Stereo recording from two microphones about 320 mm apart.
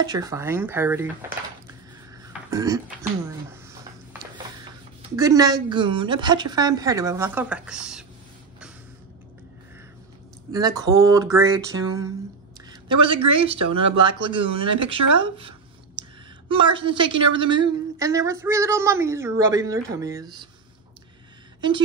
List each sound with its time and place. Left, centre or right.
0.0 s a woman's voice: centre
2.5 s a woman's voice: centre
5.1 s a woman's voice: centre
10.5 s a woman's voice: centre
13.7 s speech: right
14.0 s a woman's voice: centre
16.0 s a sound: centre
16.7 s a woman's voice: centre